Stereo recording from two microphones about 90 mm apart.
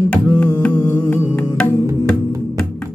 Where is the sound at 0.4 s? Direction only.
15° left (ahead or behind).